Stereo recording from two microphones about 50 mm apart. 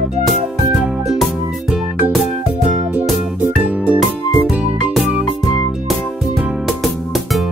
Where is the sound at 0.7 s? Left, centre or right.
Centre.